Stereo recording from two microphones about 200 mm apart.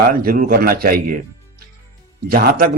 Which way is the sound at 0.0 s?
45° right (ahead or behind).